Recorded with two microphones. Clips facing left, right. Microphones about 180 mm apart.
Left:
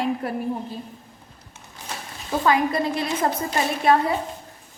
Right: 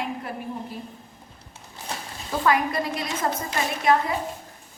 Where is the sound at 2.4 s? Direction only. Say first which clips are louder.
Left 2 dB; 25° left (ahead or behind).